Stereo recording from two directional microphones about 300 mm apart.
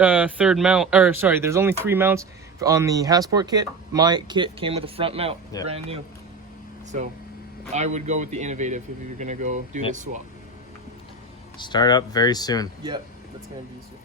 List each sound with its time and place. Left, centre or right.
0.0 s speech: centre
7.7 s speech: right
11.5 s speech: centre